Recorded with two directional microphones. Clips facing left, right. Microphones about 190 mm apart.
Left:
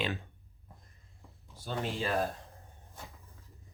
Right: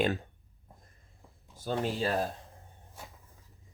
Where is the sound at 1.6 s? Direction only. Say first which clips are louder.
Right 4 dB; 40° right (ahead or behind).